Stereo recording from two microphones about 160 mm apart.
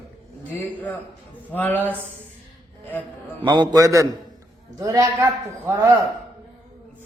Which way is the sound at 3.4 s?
30° right (ahead or behind).